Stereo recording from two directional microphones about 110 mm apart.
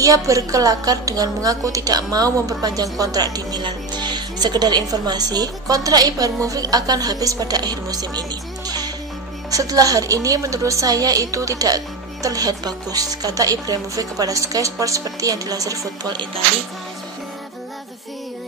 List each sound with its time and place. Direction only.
0.0 s a woman's voice: 30° right (ahead or behind)